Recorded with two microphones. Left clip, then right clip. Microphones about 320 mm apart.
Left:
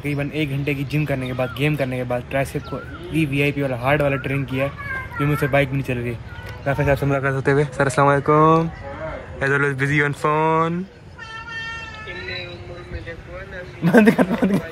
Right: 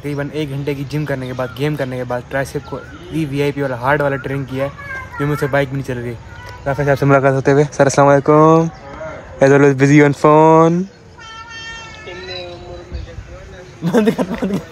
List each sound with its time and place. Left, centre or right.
0.0 s a man's voice: centre
13.8 s speech: centre